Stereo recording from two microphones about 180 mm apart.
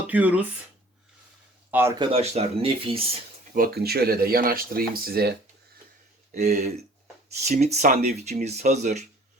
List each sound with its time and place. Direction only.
0.1 s speech: 10° right (ahead or behind)
1.7 s speech: 15° right (ahead or behind)
2.0 s speech: 35° right (ahead or behind)
3.5 s speech: 55° right (ahead or behind)
6.5 s speech: 40° right (ahead or behind)